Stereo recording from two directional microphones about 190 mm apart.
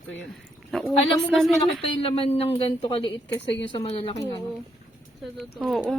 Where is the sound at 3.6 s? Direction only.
30° left (ahead or behind).